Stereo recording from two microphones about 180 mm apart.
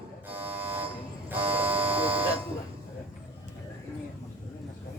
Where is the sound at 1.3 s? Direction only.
10° right (ahead or behind).